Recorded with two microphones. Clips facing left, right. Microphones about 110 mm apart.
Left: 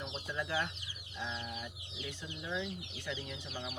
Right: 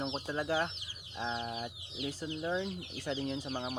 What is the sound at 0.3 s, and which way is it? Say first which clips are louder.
Speech: right 3 dB; 40° right (ahead or behind).